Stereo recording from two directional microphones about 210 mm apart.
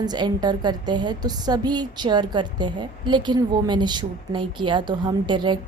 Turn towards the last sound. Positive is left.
turn(degrees=-20)  # may be behind; listen again after turning